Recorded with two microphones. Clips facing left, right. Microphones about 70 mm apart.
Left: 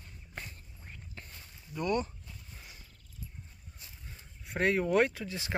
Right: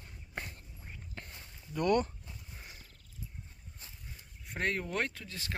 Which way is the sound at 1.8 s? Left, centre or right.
Right.